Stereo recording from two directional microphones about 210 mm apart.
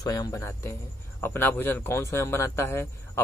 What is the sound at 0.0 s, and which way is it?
A man's voice, 20° left (ahead or behind).